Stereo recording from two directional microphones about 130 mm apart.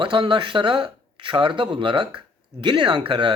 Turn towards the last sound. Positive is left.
turn(degrees=-40)  # may be behind; listen again after turning